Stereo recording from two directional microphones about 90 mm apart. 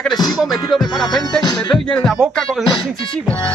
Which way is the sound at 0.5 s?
50° left (ahead or behind).